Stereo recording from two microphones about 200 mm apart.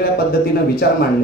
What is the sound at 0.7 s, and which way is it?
Speech, 50° left (ahead or behind).